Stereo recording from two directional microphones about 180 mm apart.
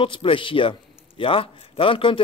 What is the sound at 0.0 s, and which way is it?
Speech, 30° left (ahead or behind).